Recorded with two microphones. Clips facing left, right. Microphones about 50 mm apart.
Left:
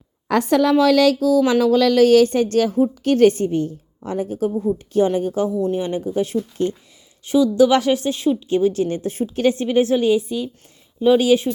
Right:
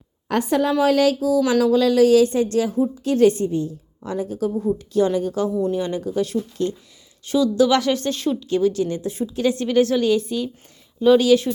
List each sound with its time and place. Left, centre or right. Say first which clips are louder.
0.3 s speech: left 3 dB; left
1.4 s a woman's voice: left 2 dB; left
4.0 s a woman's voice: left 2 dB; left
4.5 s a woman's voice: even; centre
5.0 s a woman's voice: left 1 dB; left
8.0 s a woman's voice: left 3 dB; centre
8.4 s a woman's voice: left 2 dB; left
9.6 s a woman's voice: left 1 dB; left
10.2 s a woman's voice: even; centre
11.0 s a woman's voice: even; centre